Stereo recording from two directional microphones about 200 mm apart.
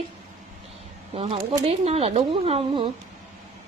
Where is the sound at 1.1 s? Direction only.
30° right (ahead or behind).